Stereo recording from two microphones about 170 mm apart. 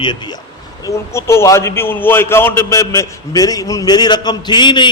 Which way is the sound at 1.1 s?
15° left (ahead or behind).